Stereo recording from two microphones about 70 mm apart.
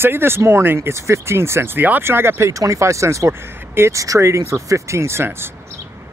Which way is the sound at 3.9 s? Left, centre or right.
Right.